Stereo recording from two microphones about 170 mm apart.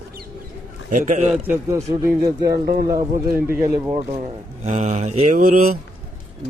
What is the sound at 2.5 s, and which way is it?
Speech, 65° right (ahead or behind).